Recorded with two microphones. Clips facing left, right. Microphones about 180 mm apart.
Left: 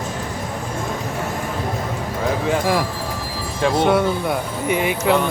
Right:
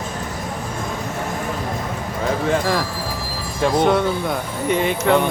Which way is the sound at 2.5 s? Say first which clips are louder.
Left 1 dB; 10° left (ahead or behind).